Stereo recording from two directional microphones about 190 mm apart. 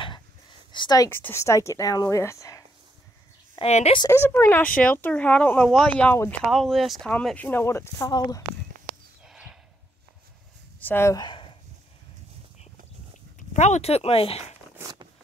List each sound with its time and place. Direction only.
0.0 s speech: 25° left (ahead or behind)
3.5 s a woman's voice: 35° left (ahead or behind)
4.1 s a woman's voice: 10° left (ahead or behind)
9.2 s a sound: 5° right (ahead or behind)
10.8 s speech: 10° left (ahead or behind)
13.4 s speech: 40° left (ahead or behind)
14.8 s a sound: 20° right (ahead or behind)